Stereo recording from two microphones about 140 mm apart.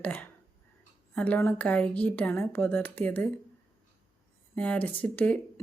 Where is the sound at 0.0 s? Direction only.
10° left (ahead or behind).